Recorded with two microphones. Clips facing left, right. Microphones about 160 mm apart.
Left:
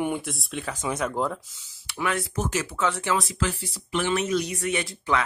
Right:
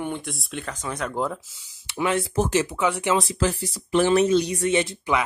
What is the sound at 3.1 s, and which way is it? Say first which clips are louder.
Speech: right 4 dB; 35° right (ahead or behind).